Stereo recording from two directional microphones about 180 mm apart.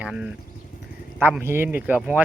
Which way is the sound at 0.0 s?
5° right (ahead or behind).